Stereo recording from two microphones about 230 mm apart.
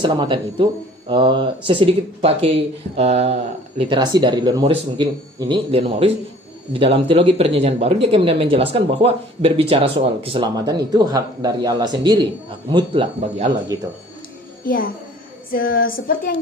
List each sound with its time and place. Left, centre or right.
0.0 s speech: centre
14.6 s a child's voice: left